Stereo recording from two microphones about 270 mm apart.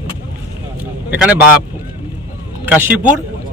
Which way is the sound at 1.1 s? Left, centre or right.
Centre.